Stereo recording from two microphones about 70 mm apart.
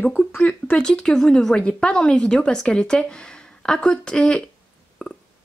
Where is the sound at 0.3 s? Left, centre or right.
Left.